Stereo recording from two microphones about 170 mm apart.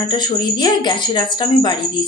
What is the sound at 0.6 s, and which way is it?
A woman's voice, 25° left (ahead or behind).